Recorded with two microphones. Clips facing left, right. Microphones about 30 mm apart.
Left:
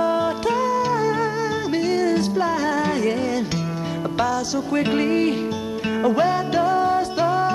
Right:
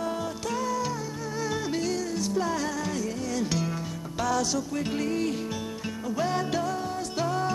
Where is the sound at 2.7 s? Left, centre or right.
Left.